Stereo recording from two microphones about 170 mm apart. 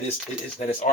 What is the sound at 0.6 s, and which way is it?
Speech, 35° left (ahead or behind).